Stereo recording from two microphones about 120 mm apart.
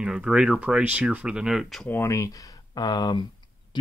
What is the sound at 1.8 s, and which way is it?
Speech, 20° left (ahead or behind).